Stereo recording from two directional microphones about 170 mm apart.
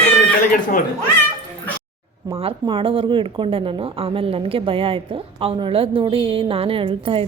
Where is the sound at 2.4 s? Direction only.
30° right (ahead or behind).